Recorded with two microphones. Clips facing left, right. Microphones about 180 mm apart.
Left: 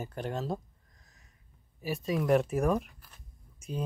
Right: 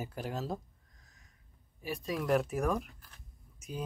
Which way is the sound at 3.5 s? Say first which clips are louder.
Left 4 dB; centre (ahead or behind).